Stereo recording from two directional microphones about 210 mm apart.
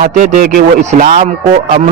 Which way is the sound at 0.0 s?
40° right (ahead or behind).